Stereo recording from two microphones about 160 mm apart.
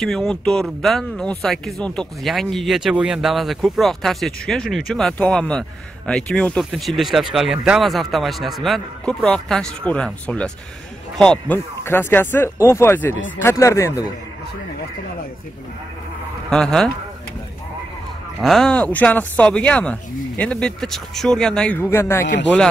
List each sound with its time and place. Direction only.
0.0 s speech: centre (ahead or behind); by 14.0 s 20° left (ahead or behind)
16.4 s speech: 5° left (ahead or behind)
18.4 s speech: centre (ahead or behind)
22.2 s speech: 90° left